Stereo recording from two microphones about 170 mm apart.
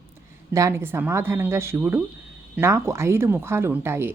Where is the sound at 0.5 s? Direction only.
15° right (ahead or behind).